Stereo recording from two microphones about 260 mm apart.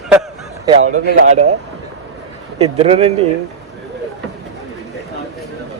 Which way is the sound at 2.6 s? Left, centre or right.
Right.